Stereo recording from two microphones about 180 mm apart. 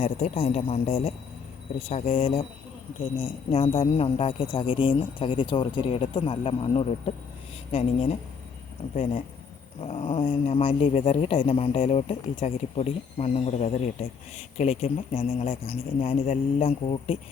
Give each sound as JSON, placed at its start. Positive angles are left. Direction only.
{"t": 0.0, "sound": "speech", "side_deg": 35}
{"t": 9.8, "sound": "speech", "side_deg": 35}